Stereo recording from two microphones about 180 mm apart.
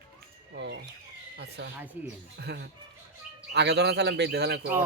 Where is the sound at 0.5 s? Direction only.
80° right.